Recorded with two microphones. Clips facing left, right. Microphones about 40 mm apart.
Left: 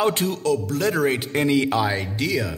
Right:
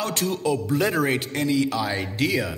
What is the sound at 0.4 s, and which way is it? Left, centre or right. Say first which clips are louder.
Speech: even; centre.